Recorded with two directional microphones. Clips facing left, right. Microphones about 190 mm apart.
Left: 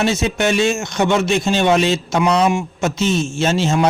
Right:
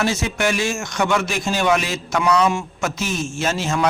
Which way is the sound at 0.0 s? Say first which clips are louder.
Left 3 dB; 20° left (ahead or behind).